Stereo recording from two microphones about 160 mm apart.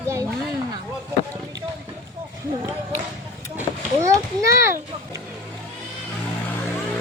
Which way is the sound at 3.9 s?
20° right (ahead or behind).